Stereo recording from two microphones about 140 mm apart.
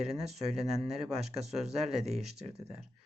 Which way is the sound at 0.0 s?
5° right (ahead or behind).